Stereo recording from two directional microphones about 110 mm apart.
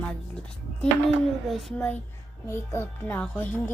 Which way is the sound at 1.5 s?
Centre (ahead or behind).